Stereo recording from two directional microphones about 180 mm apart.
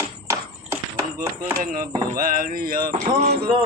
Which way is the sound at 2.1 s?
50° right (ahead or behind).